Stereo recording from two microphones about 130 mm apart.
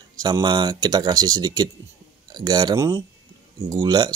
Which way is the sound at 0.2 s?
35° right (ahead or behind).